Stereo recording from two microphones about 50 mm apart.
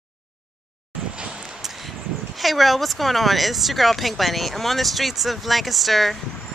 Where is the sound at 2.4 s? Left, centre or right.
Centre.